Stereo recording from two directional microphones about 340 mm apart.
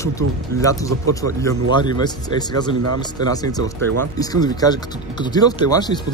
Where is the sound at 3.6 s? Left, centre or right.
Right.